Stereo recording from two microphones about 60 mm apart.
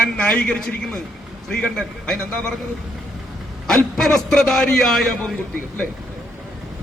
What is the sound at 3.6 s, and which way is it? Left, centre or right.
A man's voice, centre.